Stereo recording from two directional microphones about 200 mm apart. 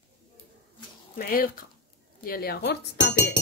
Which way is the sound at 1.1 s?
45° left (ahead or behind).